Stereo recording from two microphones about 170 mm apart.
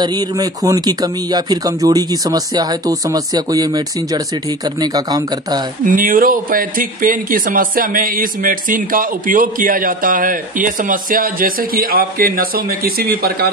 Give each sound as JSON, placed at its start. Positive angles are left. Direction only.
{"t": 0.0, "sound": "speech", "side_deg": -25}
{"t": 5.9, "sound": "speech", "side_deg": -55}